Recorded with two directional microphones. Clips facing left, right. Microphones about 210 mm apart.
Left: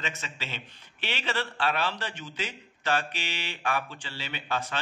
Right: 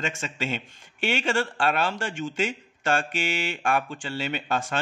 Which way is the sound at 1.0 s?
45° right (ahead or behind).